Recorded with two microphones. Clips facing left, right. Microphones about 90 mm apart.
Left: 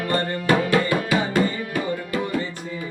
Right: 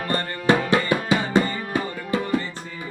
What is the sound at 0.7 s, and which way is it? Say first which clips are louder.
Music: even; 25° right (ahead or behind).